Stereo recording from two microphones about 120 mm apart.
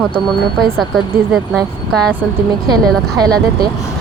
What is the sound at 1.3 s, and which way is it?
Speech, centre (ahead or behind).